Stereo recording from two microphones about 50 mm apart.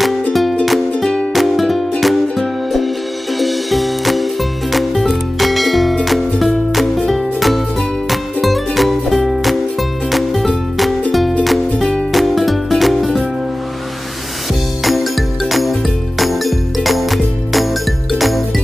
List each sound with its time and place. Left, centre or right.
0.3 s music: centre
0.9 s music: centre
1.3 s music: centre
14.8 s music: centre